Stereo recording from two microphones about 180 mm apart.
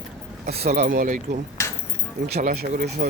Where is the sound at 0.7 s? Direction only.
45° right (ahead or behind).